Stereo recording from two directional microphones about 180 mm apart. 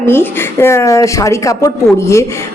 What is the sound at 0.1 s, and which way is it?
A woman's voice, 15° left (ahead or behind).